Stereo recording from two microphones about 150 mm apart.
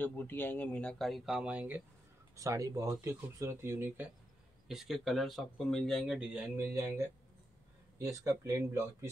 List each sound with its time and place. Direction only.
0.0 s speech: 10° left (ahead or behind); by 1.8 s 10° right (ahead or behind)
2.3 s speech: 20° right (ahead or behind)
4.6 s speech: centre (ahead or behind)
6.5 s speech: 15° right (ahead or behind)